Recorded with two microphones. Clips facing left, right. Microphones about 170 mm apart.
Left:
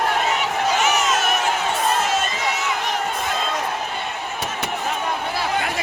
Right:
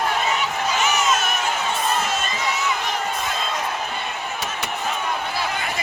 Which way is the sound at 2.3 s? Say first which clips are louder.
Even; 75° left (ahead or behind).